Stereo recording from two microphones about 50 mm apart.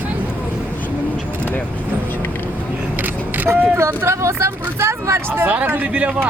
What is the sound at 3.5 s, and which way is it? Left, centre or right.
Speech, right.